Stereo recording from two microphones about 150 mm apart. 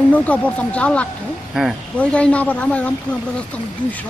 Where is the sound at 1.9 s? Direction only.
10° left (ahead or behind).